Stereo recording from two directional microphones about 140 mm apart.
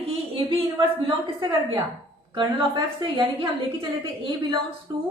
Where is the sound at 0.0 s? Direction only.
40° right (ahead or behind).